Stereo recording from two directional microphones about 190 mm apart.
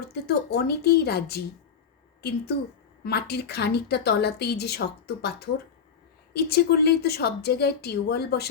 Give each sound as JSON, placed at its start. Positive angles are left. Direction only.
{"t": 0.1, "sound": "a woman's voice", "side_deg": 55}
{"t": 3.0, "sound": "a woman's voice", "side_deg": 60}
{"t": 6.3, "sound": "a woman's voice", "side_deg": 55}